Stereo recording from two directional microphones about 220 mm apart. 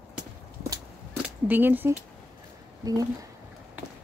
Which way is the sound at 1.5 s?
10° right (ahead or behind).